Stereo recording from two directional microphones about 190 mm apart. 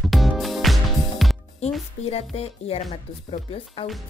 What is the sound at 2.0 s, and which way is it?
Speech, 30° left (ahead or behind).